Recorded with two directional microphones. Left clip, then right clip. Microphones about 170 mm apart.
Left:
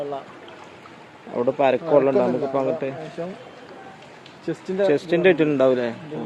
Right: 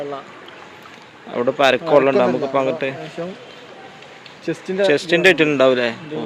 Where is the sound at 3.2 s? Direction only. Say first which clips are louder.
Right 2 dB; 45° right (ahead or behind).